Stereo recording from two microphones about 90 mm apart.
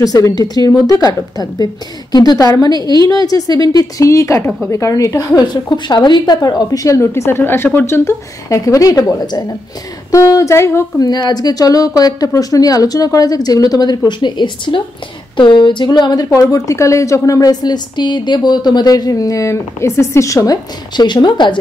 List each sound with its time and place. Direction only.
0.0 s a woman's voice: 45° left (ahead or behind)
5.4 s a woman's voice: 55° left (ahead or behind)
10.1 s a woman's voice: 35° left (ahead or behind)
11.0 s a woman's voice: 50° left (ahead or behind)
20.9 s speech: 55° left (ahead or behind)